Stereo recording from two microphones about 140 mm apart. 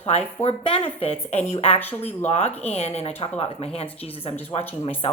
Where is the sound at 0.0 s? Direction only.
50° left (ahead or behind).